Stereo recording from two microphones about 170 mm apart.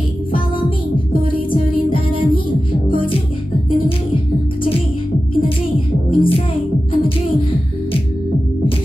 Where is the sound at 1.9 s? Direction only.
30° left (ahead or behind).